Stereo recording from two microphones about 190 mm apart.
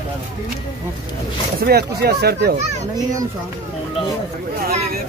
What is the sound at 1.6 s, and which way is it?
Speech, 55° right (ahead or behind).